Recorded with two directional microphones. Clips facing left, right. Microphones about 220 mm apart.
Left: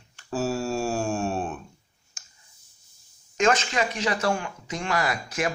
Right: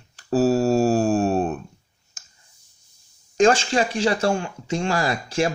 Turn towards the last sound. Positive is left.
turn(degrees=-30)  # may be behind; listen again after turning